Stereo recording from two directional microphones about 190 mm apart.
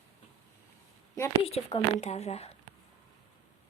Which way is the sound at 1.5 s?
30° left (ahead or behind).